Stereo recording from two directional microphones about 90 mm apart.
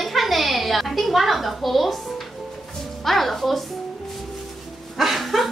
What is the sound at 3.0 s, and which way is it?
Music, centre (ahead or behind).